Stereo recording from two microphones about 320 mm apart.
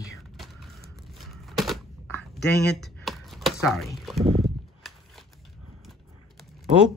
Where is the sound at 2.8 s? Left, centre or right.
Centre.